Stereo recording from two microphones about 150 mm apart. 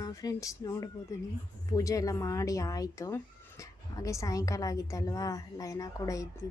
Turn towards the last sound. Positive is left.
turn(degrees=20)  # may be behind; listen again after turning